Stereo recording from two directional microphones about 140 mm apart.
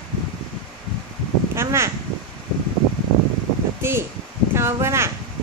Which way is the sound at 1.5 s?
20° right (ahead or behind).